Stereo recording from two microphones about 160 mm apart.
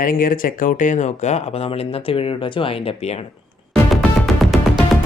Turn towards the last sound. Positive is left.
turn(degrees=0)  # may be behind; listen again after turning